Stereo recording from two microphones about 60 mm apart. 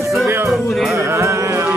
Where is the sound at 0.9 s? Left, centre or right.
Right.